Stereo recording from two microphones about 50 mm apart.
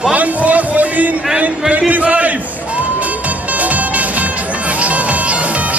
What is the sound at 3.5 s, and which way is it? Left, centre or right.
Music, right.